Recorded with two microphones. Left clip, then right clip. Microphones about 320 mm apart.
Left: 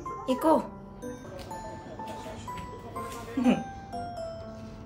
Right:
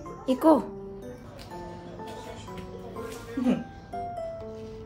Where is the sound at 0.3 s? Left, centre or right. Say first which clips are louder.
Right 3 dB; centre.